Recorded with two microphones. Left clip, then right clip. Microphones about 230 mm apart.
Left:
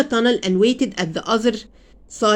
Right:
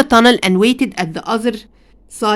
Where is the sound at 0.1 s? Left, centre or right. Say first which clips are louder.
Right 8 dB; right.